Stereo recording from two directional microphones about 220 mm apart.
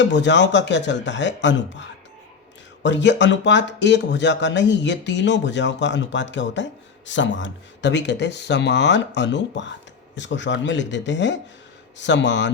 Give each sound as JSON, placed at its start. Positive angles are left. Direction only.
{"t": 0.0, "sound": "speech", "side_deg": 55}